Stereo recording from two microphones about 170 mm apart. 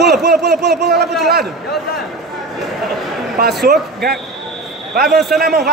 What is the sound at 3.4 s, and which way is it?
Speech, 70° right (ahead or behind).